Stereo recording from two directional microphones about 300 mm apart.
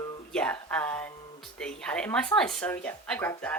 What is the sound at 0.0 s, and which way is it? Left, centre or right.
Speech, centre.